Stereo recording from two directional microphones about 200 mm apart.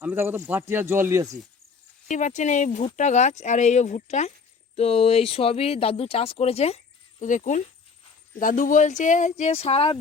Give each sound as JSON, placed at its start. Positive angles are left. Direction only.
{"t": 0.0, "sound": "speech", "side_deg": -10}
{"t": 2.0, "sound": "speech", "side_deg": 35}